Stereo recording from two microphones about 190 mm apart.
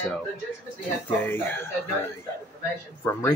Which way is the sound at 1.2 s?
10° left (ahead or behind).